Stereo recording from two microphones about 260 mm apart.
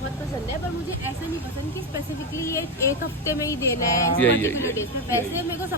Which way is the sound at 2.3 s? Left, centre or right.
Centre.